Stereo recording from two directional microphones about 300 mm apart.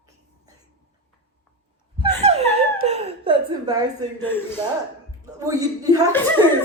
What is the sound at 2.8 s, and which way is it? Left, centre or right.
Laughter, right.